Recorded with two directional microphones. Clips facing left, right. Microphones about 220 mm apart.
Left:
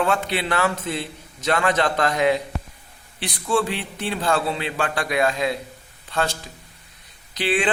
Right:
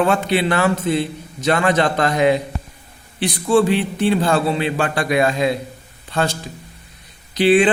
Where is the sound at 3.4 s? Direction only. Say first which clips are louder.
Right 7 dB; 30° right (ahead or behind).